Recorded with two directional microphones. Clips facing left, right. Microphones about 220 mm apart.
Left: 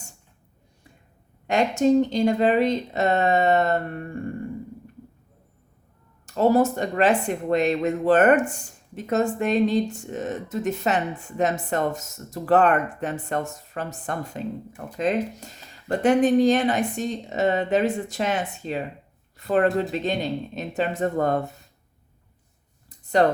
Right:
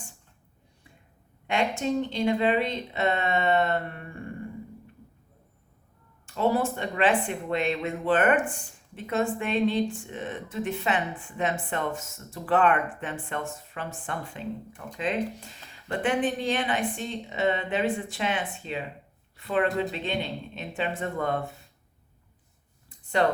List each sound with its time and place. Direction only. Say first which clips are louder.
1.5 s speech: left 7 dB; 40° left (ahead or behind)
6.2 s speech: left 6 dB; 40° left (ahead or behind)
23.2 s speech: left 4 dB; 40° left (ahead or behind)